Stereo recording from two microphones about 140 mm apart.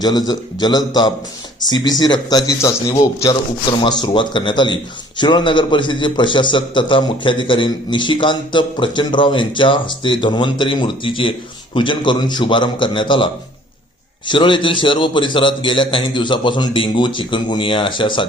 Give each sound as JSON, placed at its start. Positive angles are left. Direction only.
{"t": 0.0, "sound": "a man's voice", "side_deg": 30}